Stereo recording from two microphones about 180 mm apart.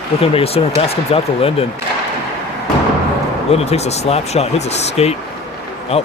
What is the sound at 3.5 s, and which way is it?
Speech, 35° left (ahead or behind).